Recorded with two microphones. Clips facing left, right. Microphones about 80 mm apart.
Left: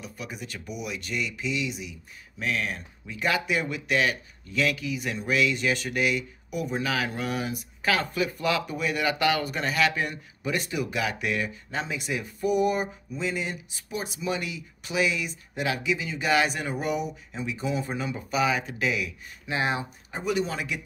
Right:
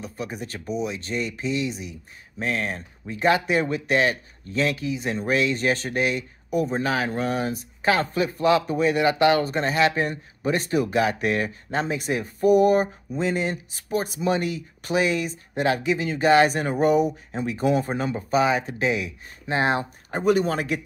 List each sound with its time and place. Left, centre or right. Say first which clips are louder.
0.0 s speech: right 6 dB; right